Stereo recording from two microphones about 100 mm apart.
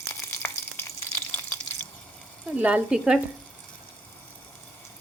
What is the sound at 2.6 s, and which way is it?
Speech, 15° right (ahead or behind).